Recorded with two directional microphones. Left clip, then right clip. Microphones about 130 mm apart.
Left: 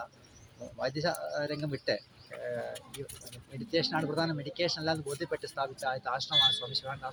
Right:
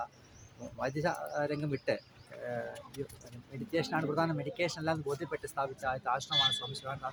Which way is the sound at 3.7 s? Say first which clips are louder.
Left 2 dB; 10° right (ahead or behind).